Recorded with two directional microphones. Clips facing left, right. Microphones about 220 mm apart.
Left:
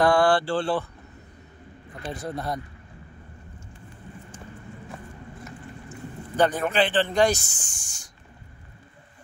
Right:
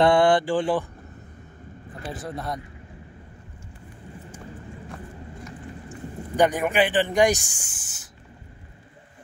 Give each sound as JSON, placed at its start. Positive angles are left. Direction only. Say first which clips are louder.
{"t": 0.0, "sound": "speech", "louder": "right 2 dB", "side_deg": -20}
{"t": 2.0, "sound": "speech", "louder": "left 1 dB", "side_deg": 0}
{"t": 5.9, "sound": "speech", "louder": "right 2 dB", "side_deg": -15}